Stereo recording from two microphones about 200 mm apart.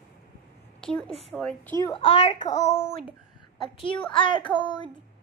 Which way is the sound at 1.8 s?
25° left (ahead or behind).